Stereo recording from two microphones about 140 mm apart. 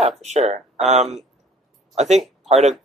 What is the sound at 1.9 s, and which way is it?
Speech, 55° right (ahead or behind).